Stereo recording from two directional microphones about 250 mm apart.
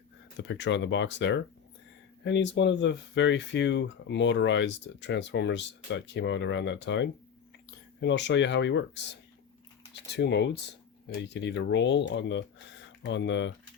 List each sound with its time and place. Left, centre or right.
0.3 s speech: left
10.2 s speech: left